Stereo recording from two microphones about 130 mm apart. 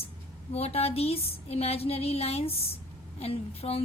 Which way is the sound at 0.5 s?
50° left (ahead or behind).